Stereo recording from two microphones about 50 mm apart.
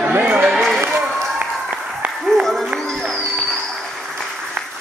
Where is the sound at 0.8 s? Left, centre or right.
Right.